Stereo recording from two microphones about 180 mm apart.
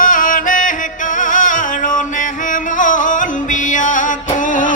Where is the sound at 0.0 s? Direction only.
50° left (ahead or behind).